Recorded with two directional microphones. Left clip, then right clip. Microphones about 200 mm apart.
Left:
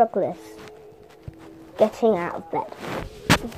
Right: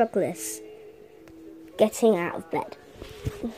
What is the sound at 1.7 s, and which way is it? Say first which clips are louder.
Speech: left 2 dB; 35° right (ahead or behind).